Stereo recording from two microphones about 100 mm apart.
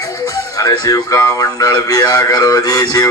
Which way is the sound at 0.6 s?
35° left (ahead or behind).